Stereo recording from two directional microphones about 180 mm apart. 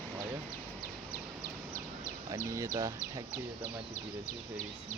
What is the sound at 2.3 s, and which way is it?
Speech, 15° right (ahead or behind).